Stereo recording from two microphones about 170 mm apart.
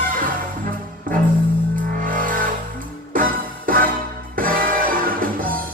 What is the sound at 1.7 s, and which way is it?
Music, 55° right (ahead or behind).